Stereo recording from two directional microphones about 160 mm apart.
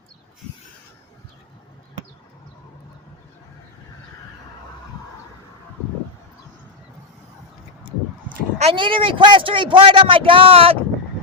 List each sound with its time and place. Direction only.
8.7 s a man's voice: 30° right (ahead or behind)